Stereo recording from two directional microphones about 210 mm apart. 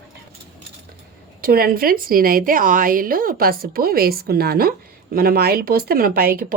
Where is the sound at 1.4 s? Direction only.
45° right (ahead or behind).